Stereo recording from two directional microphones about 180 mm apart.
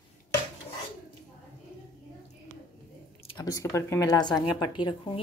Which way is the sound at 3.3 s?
20° left (ahead or behind).